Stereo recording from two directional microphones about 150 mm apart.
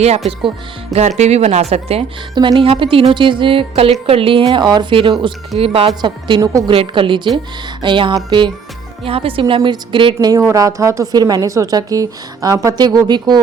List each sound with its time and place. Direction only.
0.9 s speech: 50° right (ahead or behind)
2.3 s speech: 30° right (ahead or behind)
6.7 s speech: 35° right (ahead or behind)